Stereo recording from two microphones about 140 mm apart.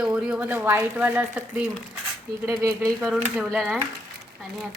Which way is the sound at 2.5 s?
25° right (ahead or behind).